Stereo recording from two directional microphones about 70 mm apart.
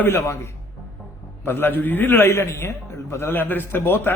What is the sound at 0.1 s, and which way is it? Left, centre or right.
A man's voice, left.